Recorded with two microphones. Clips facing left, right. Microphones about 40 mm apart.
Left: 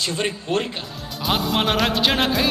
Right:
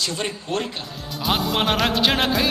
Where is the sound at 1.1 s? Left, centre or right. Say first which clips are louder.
Even; centre.